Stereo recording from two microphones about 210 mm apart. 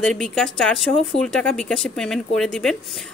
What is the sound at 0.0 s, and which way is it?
Speech, 5° left (ahead or behind).